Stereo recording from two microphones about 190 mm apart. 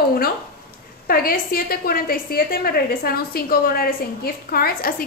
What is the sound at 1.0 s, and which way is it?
Speech, 50° left (ahead or behind).